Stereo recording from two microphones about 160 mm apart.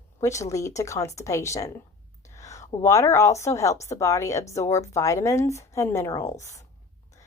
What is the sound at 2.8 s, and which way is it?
A woman's voice, 20° left (ahead or behind).